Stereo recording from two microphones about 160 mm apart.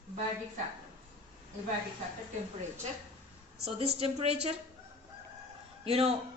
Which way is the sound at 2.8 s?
45° right (ahead or behind).